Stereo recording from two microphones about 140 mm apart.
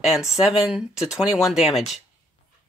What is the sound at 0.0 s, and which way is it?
Speech, centre (ahead or behind).